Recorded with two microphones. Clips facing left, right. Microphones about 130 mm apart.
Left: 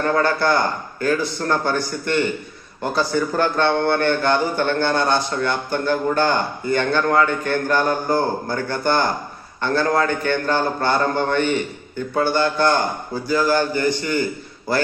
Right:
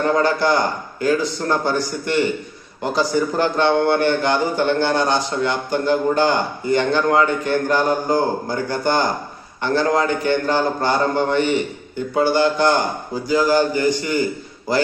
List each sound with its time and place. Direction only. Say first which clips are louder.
0.0 s a man's voice: right 1 dB; 15° right (ahead or behind)